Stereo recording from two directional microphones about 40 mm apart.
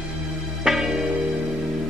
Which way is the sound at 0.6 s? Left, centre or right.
Centre.